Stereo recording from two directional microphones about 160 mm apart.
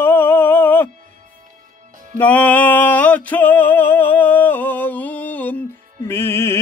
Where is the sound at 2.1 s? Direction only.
10° left (ahead or behind).